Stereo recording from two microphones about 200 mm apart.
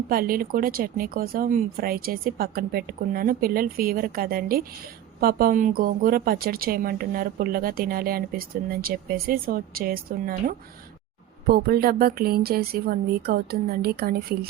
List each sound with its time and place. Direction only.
0.1 s speech: 45° right (ahead or behind)